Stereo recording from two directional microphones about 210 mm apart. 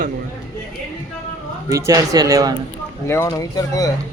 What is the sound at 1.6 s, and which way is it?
Speech, 15° right (ahead or behind).